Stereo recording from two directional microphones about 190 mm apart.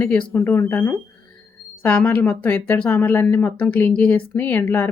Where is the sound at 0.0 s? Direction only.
5° left (ahead or behind).